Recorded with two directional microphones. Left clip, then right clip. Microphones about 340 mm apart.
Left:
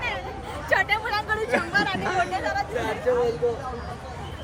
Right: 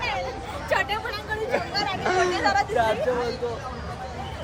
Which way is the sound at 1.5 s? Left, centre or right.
Left.